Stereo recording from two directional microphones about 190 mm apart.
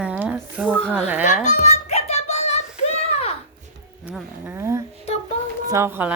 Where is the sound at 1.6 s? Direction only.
35° left (ahead or behind).